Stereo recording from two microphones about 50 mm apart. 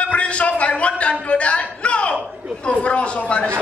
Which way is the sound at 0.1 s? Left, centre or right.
Left.